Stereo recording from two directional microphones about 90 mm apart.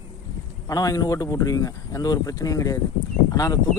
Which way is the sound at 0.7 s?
40° left (ahead or behind).